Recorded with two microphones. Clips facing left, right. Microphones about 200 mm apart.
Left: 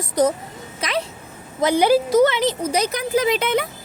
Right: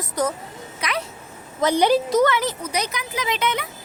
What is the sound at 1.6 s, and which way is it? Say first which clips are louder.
Speech: left 2 dB; 10° left (ahead or behind).